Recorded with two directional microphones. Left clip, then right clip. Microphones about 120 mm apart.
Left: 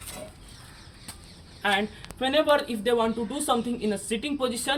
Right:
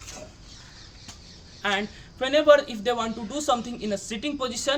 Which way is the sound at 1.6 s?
45° right (ahead or behind).